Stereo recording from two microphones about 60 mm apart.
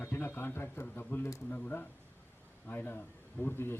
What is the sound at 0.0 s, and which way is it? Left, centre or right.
A man's voice, left.